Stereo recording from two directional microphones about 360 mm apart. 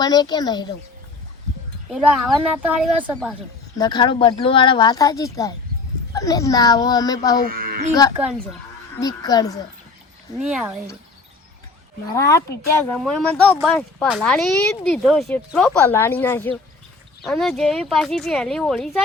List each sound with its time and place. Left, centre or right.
0.0 s speech: centre
1.9 s speech: centre
3.8 s speech: centre
7.5 s a sound: right
9.0 s speech: centre
12.1 s speech: centre